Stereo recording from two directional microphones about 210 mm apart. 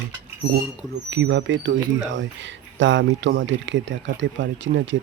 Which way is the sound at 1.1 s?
60° right (ahead or behind).